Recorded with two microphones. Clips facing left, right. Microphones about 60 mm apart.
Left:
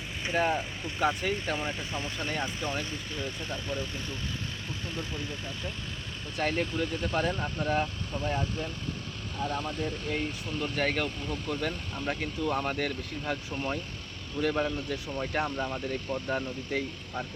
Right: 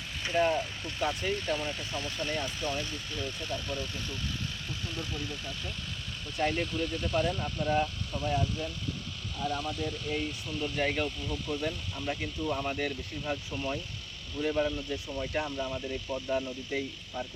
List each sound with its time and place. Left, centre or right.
0.3 s speech: left
6.4 s speech: left
15.2 s speech: left